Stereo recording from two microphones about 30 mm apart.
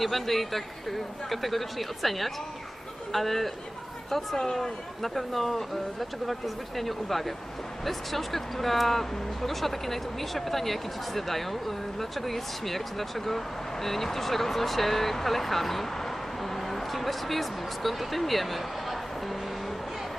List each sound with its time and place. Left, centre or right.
0.0 s speech: centre
4.4 s speech: centre
5.0 s speech: centre